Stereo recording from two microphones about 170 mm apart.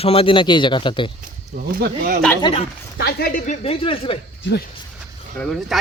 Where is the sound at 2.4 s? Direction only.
35° left (ahead or behind).